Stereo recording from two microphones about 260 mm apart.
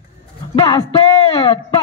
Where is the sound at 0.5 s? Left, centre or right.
Centre.